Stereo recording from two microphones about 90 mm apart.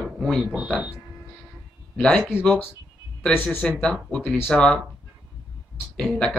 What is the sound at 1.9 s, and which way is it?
Speech, 10° left (ahead or behind).